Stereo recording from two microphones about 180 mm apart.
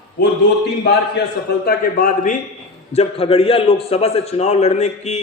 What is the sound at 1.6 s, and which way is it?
Speech, 55° left (ahead or behind).